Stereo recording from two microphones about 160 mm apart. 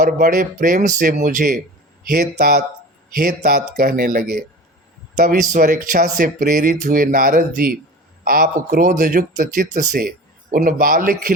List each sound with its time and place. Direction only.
0.0 s speech: 60° right (ahead or behind)
2.0 s a man's voice: 70° right (ahead or behind)
3.2 s speech: 70° right (ahead or behind)